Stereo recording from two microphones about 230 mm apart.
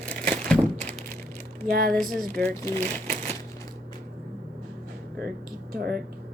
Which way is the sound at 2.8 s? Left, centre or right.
Right.